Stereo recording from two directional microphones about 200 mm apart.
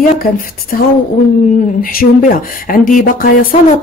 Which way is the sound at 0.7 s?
45° left (ahead or behind).